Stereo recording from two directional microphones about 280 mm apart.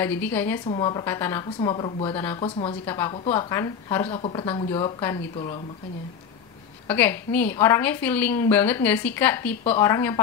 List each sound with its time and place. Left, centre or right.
0.0 s a woman's voice: centre
6.9 s a woman's voice: centre